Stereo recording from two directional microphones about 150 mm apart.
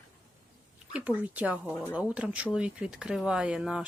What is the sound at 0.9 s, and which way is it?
Speech, 10° right (ahead or behind).